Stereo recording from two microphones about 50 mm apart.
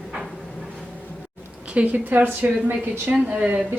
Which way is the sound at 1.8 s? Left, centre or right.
Right.